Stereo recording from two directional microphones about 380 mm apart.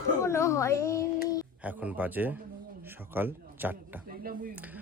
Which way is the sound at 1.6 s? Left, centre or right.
Centre.